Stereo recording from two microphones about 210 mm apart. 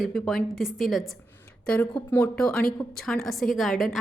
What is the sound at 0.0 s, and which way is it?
A woman's voice, centre (ahead or behind).